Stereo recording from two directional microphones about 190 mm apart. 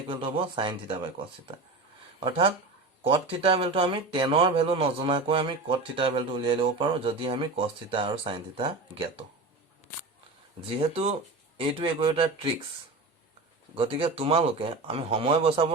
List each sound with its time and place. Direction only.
0.1 s speech: 30° right (ahead or behind)
3.0 s speech: 25° right (ahead or behind)
10.6 s speech: 30° right (ahead or behind)
13.7 s speech: 30° right (ahead or behind)